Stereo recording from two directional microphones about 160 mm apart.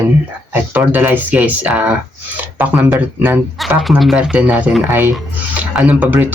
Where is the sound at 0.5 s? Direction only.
10° right (ahead or behind).